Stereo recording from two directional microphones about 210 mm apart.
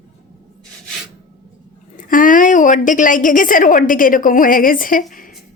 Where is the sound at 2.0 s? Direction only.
40° left (ahead or behind).